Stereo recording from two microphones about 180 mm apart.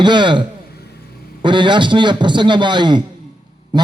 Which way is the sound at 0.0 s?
25° right (ahead or behind).